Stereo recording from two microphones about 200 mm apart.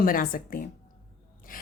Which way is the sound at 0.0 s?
45° left (ahead or behind).